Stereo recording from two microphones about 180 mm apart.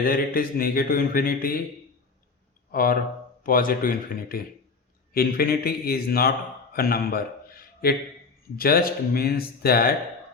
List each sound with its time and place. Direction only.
0.0 s speech: 55° left (ahead or behind)
2.7 s speech: 55° left (ahead or behind)
6.7 s a sound: 55° left (ahead or behind)
8.5 s speech: 55° left (ahead or behind)